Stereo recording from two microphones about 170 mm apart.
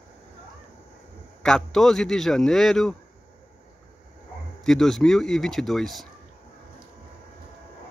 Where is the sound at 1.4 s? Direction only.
5° left (ahead or behind).